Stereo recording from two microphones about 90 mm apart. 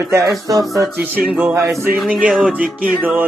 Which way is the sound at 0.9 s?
20° right (ahead or behind).